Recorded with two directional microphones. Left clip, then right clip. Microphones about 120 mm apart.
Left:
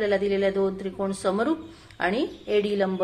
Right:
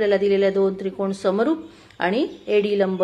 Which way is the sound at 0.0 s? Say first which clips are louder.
Right 5 dB; 30° right (ahead or behind).